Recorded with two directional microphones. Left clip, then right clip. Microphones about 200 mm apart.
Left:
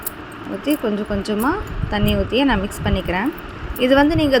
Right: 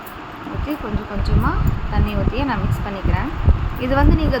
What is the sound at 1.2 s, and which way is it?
A woman's voice, 35° left (ahead or behind).